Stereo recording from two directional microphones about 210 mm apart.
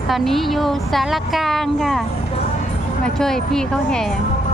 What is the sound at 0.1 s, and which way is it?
A woman's voice, centre (ahead or behind).